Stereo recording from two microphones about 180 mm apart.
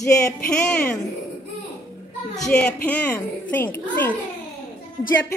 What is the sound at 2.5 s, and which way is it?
A child's voice, 5° left (ahead or behind).